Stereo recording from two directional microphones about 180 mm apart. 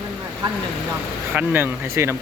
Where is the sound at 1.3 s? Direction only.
10° right (ahead or behind).